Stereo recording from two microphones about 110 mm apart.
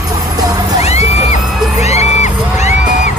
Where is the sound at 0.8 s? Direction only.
75° left (ahead or behind); by 3.1 s 90° left.